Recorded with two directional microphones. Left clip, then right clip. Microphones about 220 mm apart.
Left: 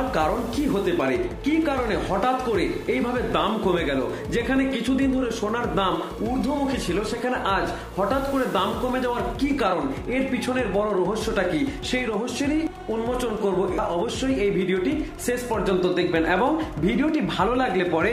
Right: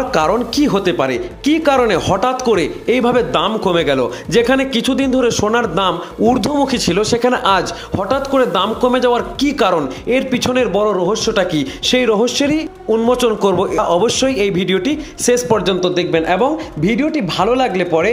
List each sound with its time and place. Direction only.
0.1 s speech: 50° right (ahead or behind)
14.0 s speech: 50° right (ahead or behind); by 18.1 s 35° right (ahead or behind)